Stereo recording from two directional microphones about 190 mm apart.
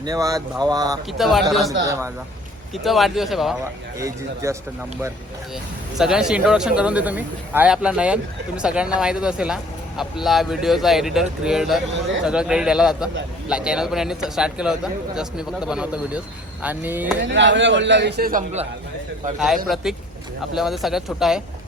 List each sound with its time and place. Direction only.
0.0 s speech: 20° right (ahead or behind)
1.2 s a man's voice: centre (ahead or behind)
1.8 s speech: 15° right (ahead or behind)
2.7 s a man's voice: centre (ahead or behind)
3.6 s speech: 15° right (ahead or behind)
6.0 s a man's voice: 5° right (ahead or behind)
17.2 s a man's voice: 70° right (ahead or behind); by 18.4 s 50° right (ahead or behind)
19.6 s a man's voice: centre (ahead or behind)